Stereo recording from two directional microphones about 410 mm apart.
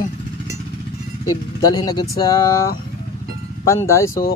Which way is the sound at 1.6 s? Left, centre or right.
Centre.